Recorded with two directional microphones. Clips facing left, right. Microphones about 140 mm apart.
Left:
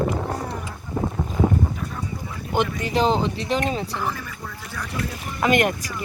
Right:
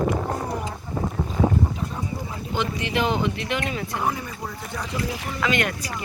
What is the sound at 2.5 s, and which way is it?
Speech, 50° left (ahead or behind).